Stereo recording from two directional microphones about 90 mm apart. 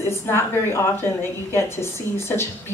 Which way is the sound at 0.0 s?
30° left (ahead or behind).